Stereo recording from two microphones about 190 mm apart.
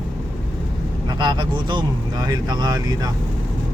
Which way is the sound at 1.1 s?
20° right (ahead or behind).